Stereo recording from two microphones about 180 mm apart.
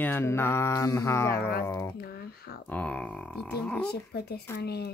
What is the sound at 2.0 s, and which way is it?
Typing, 60° left (ahead or behind).